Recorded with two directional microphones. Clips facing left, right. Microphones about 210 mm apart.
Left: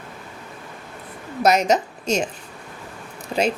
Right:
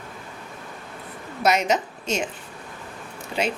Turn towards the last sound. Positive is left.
turn(degrees=45)  # may be behind; listen again after turning